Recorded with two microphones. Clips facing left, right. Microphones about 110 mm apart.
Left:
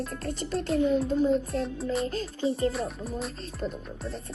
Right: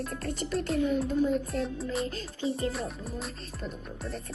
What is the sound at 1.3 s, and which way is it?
Speech, centre (ahead or behind).